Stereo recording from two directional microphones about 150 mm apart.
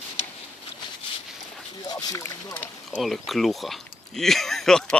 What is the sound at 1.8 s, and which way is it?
Speech, 25° left (ahead or behind).